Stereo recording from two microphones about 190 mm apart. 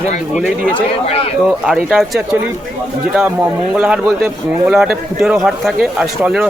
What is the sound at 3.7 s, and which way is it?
Speech, 5° right (ahead or behind).